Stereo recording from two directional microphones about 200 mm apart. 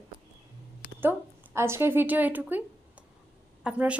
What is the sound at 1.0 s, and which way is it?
A woman's voice, 10° right (ahead or behind).